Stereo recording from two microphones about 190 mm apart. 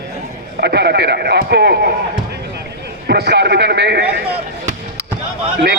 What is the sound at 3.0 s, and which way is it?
A man's voice, 60° right (ahead or behind).